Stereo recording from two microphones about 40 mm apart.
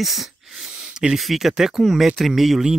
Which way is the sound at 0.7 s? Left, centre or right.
Right.